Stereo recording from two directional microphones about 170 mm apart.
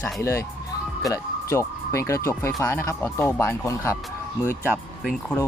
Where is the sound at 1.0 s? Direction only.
20° left (ahead or behind).